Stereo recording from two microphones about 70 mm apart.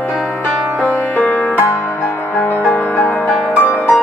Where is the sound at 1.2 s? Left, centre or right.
Left.